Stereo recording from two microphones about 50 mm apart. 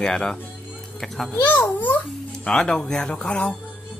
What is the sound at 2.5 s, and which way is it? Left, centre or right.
Speech, centre.